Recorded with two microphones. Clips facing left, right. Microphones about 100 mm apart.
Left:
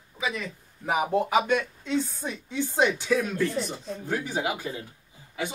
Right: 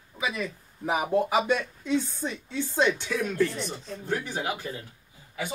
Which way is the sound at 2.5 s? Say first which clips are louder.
Left 4 dB; 20° left (ahead or behind).